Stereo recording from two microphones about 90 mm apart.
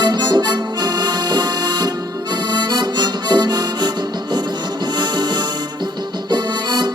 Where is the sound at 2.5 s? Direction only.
55° right (ahead or behind).